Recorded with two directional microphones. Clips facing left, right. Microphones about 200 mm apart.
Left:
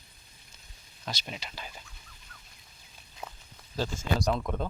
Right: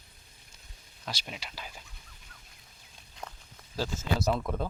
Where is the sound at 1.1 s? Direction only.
5° right (ahead or behind).